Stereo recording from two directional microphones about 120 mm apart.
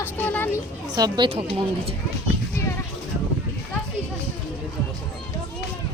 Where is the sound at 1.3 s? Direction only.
50° right (ahead or behind).